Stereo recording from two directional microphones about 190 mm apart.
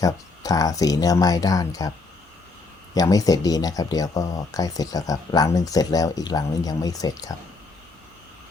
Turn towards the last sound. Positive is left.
turn(degrees=20)  # may be behind; listen again after turning